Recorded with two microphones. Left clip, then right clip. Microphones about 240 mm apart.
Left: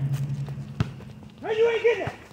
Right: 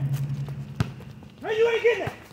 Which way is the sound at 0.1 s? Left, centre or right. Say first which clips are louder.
Even; centre.